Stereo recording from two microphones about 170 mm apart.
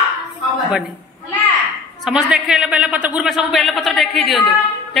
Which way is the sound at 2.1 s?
5° right (ahead or behind).